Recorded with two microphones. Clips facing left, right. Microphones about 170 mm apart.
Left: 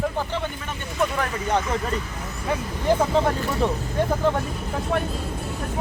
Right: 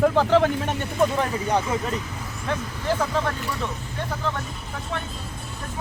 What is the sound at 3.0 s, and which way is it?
Speech, 25° left (ahead or behind).